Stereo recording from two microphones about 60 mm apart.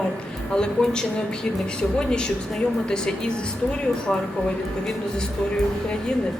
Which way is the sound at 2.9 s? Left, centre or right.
Centre.